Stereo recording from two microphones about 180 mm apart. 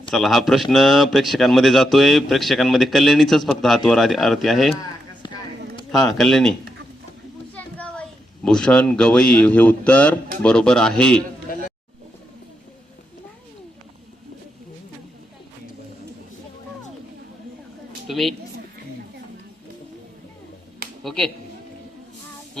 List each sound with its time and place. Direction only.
0.1 s a man's voice: centre (ahead or behind)
5.2 s a sound: 20° left (ahead or behind)
5.9 s a man's voice: centre (ahead or behind)
7.5 s children playing: 5° left (ahead or behind)
8.4 s a man's voice: 5° left (ahead or behind)
11.5 s a sound: 50° left (ahead or behind)
18.1 s speech: centre (ahead or behind)
21.0 s speech: centre (ahead or behind)